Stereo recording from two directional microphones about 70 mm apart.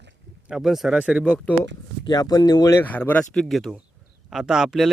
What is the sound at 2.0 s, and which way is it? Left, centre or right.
Speech, left.